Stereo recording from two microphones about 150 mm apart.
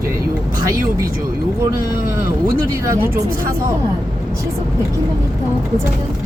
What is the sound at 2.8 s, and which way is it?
Speech, 15° right (ahead or behind).